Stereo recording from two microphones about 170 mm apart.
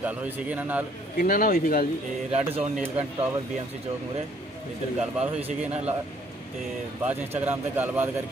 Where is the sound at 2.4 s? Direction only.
5° right (ahead or behind).